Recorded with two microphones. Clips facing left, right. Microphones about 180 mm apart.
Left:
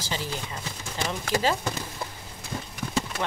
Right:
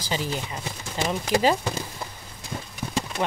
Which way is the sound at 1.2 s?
15° right (ahead or behind).